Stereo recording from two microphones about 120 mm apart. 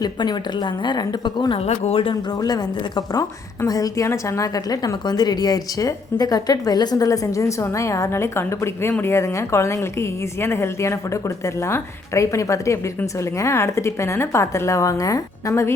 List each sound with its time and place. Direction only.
0.0 s a woman's voice: 35° left (ahead or behind)
1.6 s speech: 60° left (ahead or behind)
2.3 s a woman's voice: 35° left (ahead or behind)